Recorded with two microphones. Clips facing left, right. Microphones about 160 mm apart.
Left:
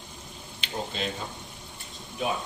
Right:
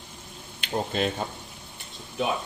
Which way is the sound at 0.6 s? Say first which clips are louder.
Right 6 dB; 55° right (ahead or behind).